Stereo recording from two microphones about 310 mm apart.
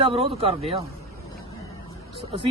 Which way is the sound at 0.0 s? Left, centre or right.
Centre.